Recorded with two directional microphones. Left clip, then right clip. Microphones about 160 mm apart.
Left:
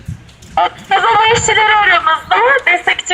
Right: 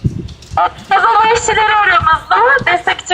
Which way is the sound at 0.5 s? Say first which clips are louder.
Right 1 dB; 20° left (ahead or behind).